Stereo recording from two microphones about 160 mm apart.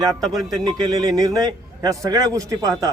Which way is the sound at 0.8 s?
25° right (ahead or behind).